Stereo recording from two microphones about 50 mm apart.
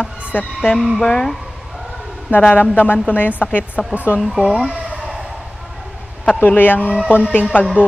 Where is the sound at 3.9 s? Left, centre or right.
Right.